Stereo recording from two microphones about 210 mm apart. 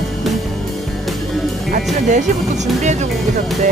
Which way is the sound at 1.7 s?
35° right (ahead or behind).